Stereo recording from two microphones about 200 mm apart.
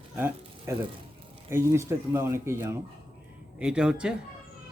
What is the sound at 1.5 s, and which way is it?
Speech, 15° right (ahead or behind).